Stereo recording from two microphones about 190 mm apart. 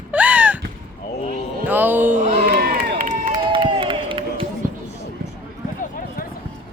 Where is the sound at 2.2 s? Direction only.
45° right (ahead or behind).